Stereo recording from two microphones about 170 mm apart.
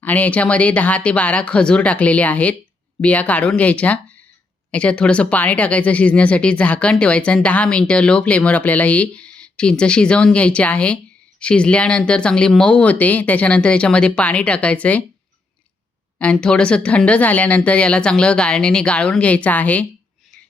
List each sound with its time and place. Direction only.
0.0 s speech: 10° left (ahead or behind)
16.1 s speech: 5° left (ahead or behind)